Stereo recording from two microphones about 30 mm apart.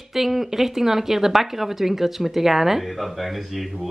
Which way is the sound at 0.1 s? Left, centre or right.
Centre.